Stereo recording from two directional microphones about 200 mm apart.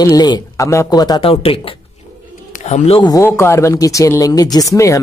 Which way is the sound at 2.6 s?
35° left (ahead or behind).